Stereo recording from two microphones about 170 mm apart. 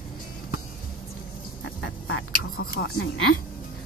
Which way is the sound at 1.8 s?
90° left.